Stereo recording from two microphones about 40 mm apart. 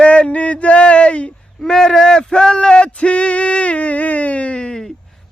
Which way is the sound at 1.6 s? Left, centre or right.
Centre.